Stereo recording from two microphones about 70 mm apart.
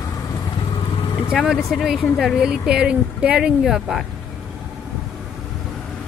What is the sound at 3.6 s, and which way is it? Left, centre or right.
Speech, centre.